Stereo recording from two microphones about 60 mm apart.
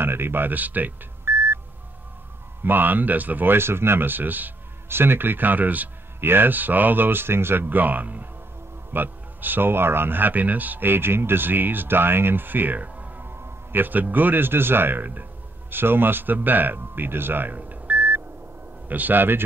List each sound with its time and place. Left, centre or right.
0.0 s speech: right
1.2 s beep: right
2.6 s speech: right